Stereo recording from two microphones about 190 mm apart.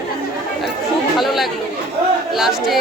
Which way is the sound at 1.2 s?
Centre (ahead or behind).